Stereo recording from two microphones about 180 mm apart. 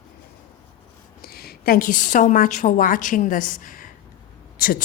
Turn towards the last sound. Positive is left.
turn(degrees=55)  # may be behind; listen again after turning